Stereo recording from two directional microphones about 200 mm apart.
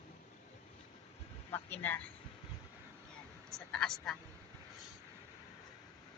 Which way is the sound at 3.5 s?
Centre (ahead or behind).